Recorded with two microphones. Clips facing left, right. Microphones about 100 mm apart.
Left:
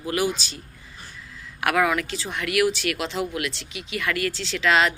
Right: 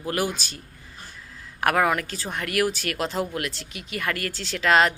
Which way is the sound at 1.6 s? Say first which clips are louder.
Even; 40° right (ahead or behind).